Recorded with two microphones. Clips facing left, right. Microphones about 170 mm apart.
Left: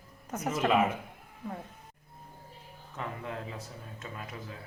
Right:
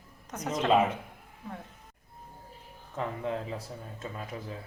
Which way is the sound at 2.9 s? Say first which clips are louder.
Right 5 dB; 30° right (ahead or behind).